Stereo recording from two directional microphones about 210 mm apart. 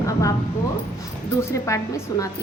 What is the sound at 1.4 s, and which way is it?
Speech, 15° left (ahead or behind).